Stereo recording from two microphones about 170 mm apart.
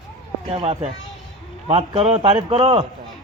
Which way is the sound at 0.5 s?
30° right (ahead or behind).